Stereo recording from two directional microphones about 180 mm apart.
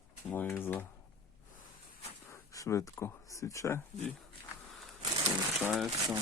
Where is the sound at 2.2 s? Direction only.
15° left (ahead or behind).